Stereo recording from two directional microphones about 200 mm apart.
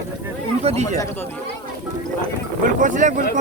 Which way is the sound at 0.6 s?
30° right (ahead or behind).